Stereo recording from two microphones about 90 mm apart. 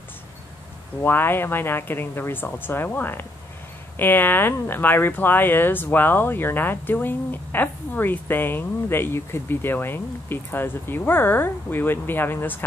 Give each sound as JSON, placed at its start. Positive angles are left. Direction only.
{"t": 1.0, "sound": "speech", "side_deg": 25}